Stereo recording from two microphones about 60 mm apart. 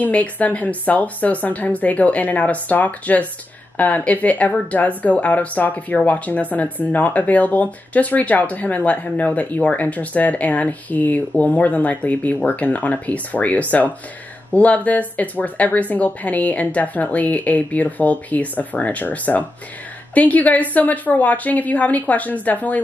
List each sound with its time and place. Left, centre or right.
0.0 s speech: left